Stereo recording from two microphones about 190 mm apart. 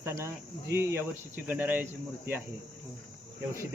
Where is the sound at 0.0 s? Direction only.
15° right (ahead or behind).